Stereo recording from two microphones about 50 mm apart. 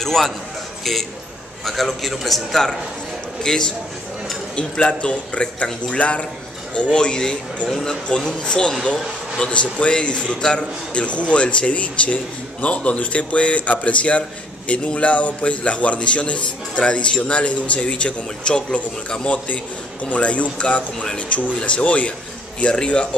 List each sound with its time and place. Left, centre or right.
0.0 s speech: centre
1.6 s a man's voice: centre; by 23.0 s left